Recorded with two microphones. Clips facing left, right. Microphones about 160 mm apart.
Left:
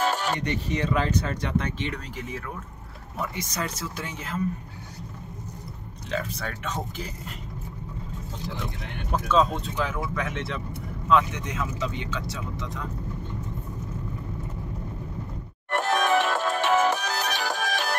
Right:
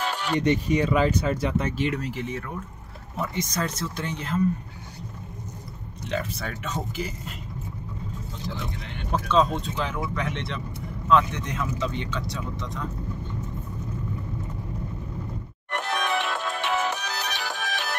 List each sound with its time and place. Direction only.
0.0 s a sound: 40° left (ahead or behind)
0.4 s speech: 15° right (ahead or behind); by 2.4 s centre (ahead or behind)
3.3 s speech: 10° left (ahead or behind)
6.0 s speech: 5° right (ahead or behind)
9.3 s speech: 5° left (ahead or behind)
15.7 s music: 45° left (ahead or behind)